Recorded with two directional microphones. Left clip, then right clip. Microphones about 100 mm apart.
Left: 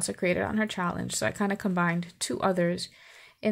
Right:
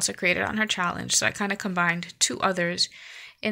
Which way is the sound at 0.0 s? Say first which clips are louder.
Right 4 dB; 30° left (ahead or behind).